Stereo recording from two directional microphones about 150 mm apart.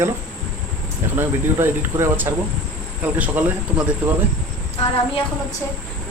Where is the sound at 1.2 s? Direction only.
15° right (ahead or behind).